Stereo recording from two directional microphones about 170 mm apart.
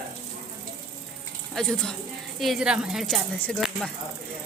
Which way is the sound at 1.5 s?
5° left (ahead or behind).